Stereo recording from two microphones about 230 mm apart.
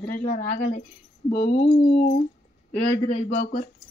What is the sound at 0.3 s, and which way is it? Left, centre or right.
Speech, left.